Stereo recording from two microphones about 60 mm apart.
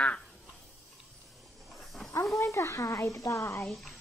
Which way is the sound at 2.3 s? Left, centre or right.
Left.